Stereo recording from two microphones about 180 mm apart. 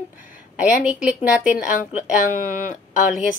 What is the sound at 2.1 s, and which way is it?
Speech, 45° left (ahead or behind).